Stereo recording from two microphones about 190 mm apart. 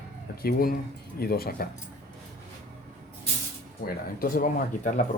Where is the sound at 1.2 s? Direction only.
55° left (ahead or behind).